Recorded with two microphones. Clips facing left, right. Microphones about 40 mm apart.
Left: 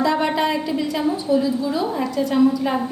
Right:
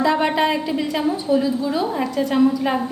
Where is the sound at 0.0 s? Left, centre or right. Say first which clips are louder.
Right 1 dB; right.